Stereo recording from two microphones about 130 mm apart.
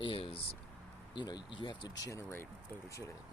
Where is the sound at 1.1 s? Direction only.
35° left (ahead or behind).